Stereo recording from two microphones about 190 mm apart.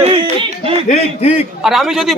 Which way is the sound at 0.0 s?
25° right (ahead or behind).